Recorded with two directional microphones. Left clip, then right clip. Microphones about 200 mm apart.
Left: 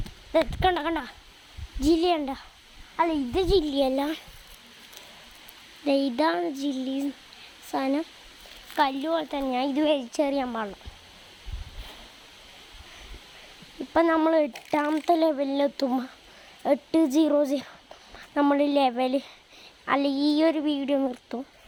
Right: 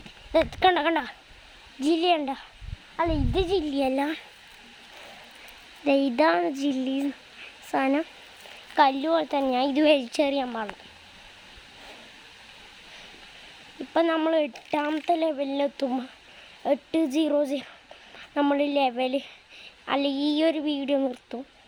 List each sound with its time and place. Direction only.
0.3 s a woman's voice: 20° right (ahead or behind)
1.8 s a woman's voice: 5° right (ahead or behind)
5.8 s a woman's voice: 15° right (ahead or behind)
10.3 s a woman's voice: 5° left (ahead or behind)
13.9 s a woman's voice: 5° left (ahead or behind)
15.0 s a woman's voice: 15° left (ahead or behind); by 21.3 s centre (ahead or behind)